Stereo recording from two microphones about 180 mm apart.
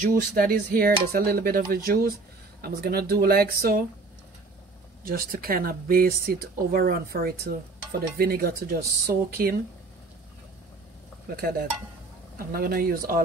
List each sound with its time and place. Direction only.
0.0 s speech: 50° right (ahead or behind)
5.0 s speech: 55° right (ahead or behind)
11.3 s speech: 55° right (ahead or behind)